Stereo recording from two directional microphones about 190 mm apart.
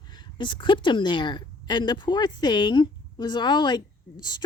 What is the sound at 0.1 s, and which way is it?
A woman's voice, 25° left (ahead or behind).